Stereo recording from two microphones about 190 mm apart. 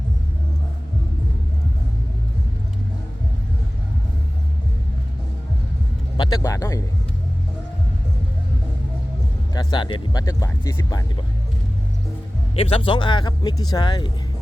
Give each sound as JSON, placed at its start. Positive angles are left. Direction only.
{"t": 6.1, "sound": "speech", "side_deg": 20}
{"t": 9.6, "sound": "speech", "side_deg": 25}
{"t": 12.5, "sound": "speech", "side_deg": 30}